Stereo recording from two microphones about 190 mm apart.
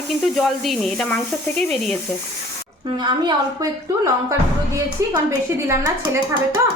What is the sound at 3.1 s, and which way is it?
A woman's voice, 20° right (ahead or behind).